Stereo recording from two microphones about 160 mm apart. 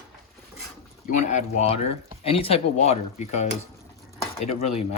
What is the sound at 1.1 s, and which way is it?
Speech, 45° left (ahead or behind).